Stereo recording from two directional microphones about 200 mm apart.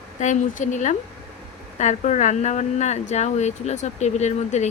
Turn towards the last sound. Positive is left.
turn(degrees=35)  # may be behind; listen again after turning